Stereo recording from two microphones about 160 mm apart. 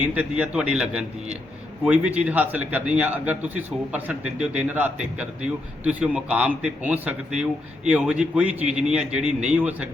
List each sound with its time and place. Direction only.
0.0 s a man's voice: 10° right (ahead or behind)